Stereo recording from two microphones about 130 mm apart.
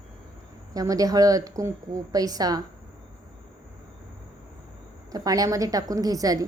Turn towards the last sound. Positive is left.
turn(degrees=-25)  # may be behind; listen again after turning